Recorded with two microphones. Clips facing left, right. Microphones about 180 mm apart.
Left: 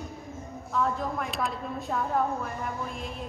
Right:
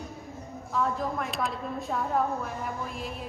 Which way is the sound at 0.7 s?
Centre (ahead or behind).